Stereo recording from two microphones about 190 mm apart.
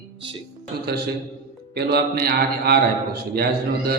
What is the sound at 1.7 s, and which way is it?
A man's voice, 55° right (ahead or behind).